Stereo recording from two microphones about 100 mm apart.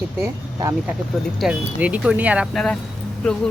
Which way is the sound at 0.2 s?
35° right (ahead or behind).